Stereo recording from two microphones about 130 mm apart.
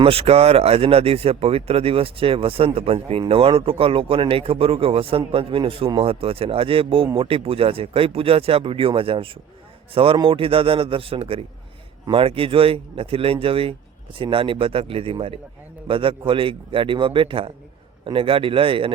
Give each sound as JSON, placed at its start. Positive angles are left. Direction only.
{"t": 0.0, "sound": "a man's voice", "side_deg": -50}